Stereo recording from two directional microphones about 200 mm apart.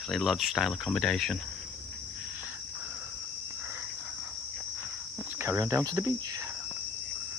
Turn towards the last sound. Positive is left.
turn(degrees=-15)  # may be behind; listen again after turning